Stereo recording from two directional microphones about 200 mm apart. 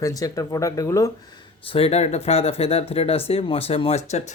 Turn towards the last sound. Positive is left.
turn(degrees=35)  # may be behind; listen again after turning